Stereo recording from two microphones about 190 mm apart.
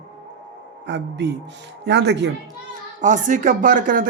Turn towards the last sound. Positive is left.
turn(degrees=-45)  # may be behind; listen again after turning